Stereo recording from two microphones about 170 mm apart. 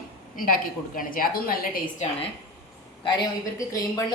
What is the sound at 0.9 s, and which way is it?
A woman's voice, 55° left (ahead or behind).